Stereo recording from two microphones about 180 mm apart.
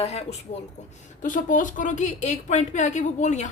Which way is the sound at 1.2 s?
45° left (ahead or behind).